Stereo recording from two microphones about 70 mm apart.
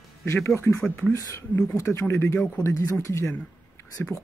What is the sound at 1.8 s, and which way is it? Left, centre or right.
Speech, left.